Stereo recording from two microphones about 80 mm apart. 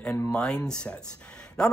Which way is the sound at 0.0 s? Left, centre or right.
Centre.